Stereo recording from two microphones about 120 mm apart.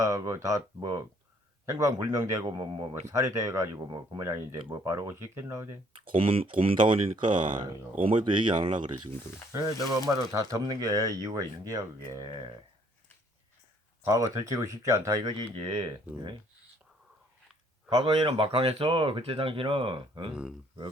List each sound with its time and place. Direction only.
0.0 s speech: 25° right (ahead or behind)
3.8 s speech: 40° right (ahead or behind)
4.2 s speech: 20° right (ahead or behind)
6.1 s speech: 50° right (ahead or behind)
9.5 s speech: 25° right (ahead or behind)
14.1 s speech: 25° right (ahead or behind); by 15.9 s 45° right (ahead or behind)
17.8 s speech: 50° right (ahead or behind)